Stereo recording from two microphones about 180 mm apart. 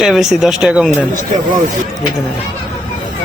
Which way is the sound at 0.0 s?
Centre (ahead or behind).